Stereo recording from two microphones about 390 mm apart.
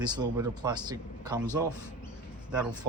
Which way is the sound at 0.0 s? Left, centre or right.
Centre.